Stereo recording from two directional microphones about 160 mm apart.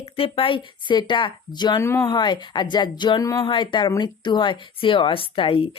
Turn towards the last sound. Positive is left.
turn(degrees=35)  # may be behind; listen again after turning